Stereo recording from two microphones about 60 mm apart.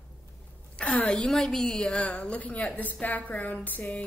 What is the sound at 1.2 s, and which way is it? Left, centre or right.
Speech, centre.